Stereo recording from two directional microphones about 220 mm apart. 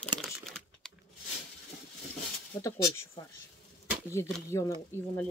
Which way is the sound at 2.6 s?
15° left (ahead or behind).